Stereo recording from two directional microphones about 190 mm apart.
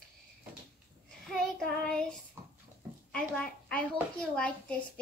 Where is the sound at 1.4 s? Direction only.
5° left (ahead or behind).